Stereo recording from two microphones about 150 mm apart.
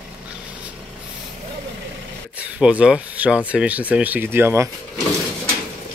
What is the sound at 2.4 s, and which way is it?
Speech, 10° right (ahead or behind).